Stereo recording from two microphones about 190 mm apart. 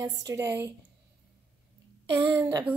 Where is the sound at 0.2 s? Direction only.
15° right (ahead or behind).